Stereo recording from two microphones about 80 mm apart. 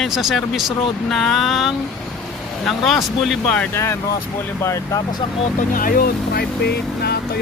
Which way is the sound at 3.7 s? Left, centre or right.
Left.